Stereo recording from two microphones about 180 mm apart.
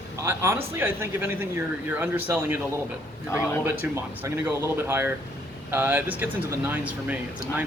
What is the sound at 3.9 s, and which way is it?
A man's voice, 15° right (ahead or behind).